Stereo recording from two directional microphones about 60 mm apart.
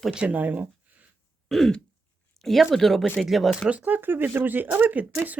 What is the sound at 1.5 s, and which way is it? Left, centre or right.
Throat clearing, centre.